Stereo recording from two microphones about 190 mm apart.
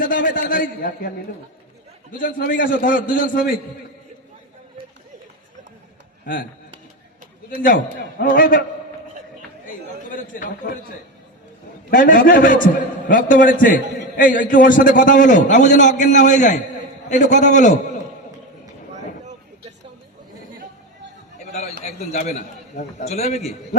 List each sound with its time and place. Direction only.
0.0 s a man's voice: 45° left (ahead or behind)
2.1 s a man's voice: 45° left (ahead or behind)
7.6 s a man's voice: 45° left (ahead or behind)
9.6 s a man's voice: 45° left (ahead or behind)
11.9 s a man's voice: 45° left (ahead or behind)
21.3 s a sound: 35° left (ahead or behind)
21.8 s a man's voice: 35° left (ahead or behind)